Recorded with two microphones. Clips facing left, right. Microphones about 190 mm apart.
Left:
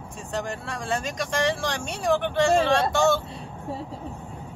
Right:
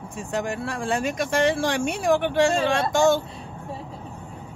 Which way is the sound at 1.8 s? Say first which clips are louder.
Right 3 dB; 10° right (ahead or behind).